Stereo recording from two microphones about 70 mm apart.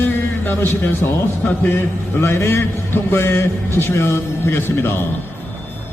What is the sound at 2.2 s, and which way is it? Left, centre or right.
A man's voice, left.